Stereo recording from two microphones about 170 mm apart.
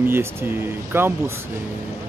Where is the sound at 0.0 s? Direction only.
15° right (ahead or behind).